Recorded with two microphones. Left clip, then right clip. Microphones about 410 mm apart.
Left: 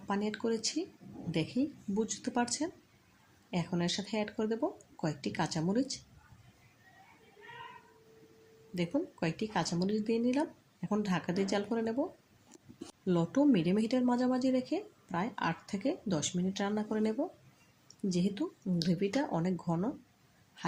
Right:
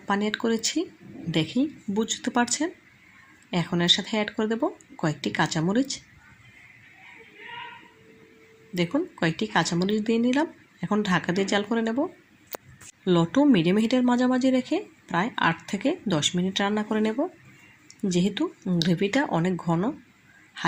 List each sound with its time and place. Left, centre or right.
0.1 s speech: right
8.7 s speech: right
13.1 s speech: right